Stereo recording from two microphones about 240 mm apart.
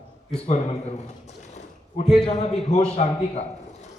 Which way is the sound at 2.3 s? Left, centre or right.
Left.